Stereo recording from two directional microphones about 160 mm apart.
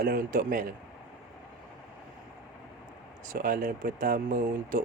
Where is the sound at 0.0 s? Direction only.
65° right (ahead or behind).